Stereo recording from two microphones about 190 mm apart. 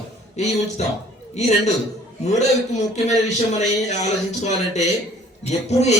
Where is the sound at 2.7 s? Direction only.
35° left (ahead or behind).